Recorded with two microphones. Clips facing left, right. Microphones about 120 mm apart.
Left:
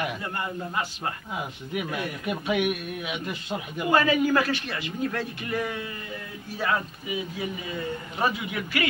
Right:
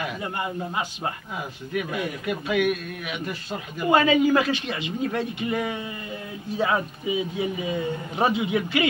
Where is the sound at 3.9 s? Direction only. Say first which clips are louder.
Right 3 dB; 20° right (ahead or behind).